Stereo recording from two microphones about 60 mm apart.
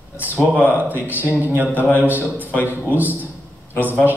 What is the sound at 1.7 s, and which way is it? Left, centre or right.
Speech, left.